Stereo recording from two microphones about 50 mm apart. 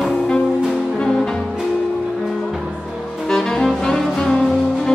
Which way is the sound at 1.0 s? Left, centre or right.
Centre.